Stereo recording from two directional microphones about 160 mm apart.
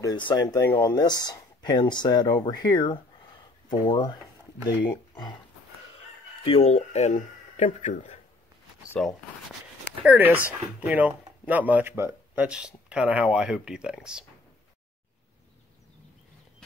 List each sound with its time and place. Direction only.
0.0 s speech: 30° left (ahead or behind)
6.4 s speech: 40° left (ahead or behind)
9.0 s speech: centre (ahead or behind)
10.0 s speech: 10° right (ahead or behind)